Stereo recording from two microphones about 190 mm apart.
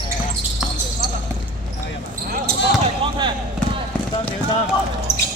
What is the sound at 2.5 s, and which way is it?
Basketball bounce, 55° right (ahead or behind).